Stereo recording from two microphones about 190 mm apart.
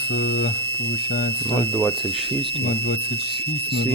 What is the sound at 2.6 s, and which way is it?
Speech, 55° left (ahead or behind).